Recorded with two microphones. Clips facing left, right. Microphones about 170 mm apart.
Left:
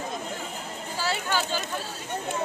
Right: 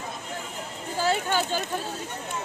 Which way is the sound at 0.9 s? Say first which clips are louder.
Right 4 dB; 50° right (ahead or behind).